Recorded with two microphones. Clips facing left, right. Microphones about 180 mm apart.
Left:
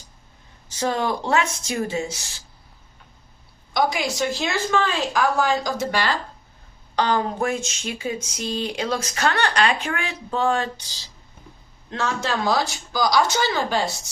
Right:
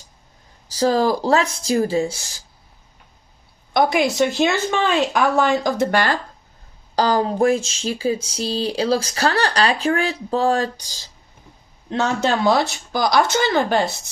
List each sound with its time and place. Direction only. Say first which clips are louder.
0.7 s speech: right 6 dB; 35° right (ahead or behind)
3.8 s speech: right 5 dB; 60° right (ahead or behind)
6.9 s speech: right 4 dB; 35° right (ahead or behind)
11.9 s speech: right 5 dB; 65° right (ahead or behind)